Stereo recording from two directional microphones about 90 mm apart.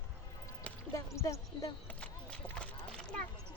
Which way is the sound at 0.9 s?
35° left (ahead or behind).